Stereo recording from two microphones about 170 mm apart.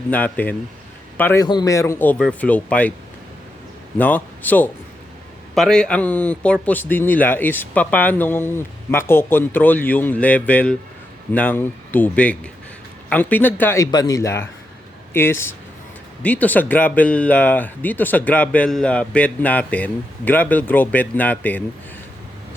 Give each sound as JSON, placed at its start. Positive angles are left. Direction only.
{"t": 0.1, "sound": "a man's voice", "side_deg": 10}
{"t": 3.9, "sound": "speech", "side_deg": 10}